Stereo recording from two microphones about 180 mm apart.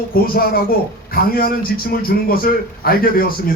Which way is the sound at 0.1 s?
55° left (ahead or behind).